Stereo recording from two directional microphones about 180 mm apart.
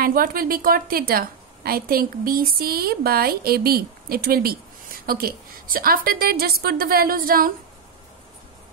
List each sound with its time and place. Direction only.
0.0 s a woman's voice: 55° right (ahead or behind)